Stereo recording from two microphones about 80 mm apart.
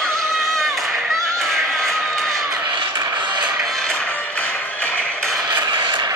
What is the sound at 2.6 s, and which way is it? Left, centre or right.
Music, right.